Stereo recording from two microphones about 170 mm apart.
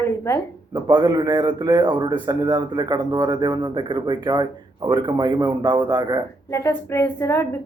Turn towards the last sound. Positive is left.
turn(degrees=15)  # may be behind; listen again after turning